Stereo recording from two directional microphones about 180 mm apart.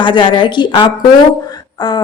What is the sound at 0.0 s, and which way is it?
A woman's voice, 25° left (ahead or behind).